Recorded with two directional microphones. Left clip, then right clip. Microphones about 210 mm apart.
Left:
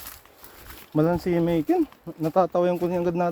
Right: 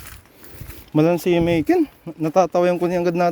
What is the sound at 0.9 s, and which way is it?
Speech, 50° right (ahead or behind).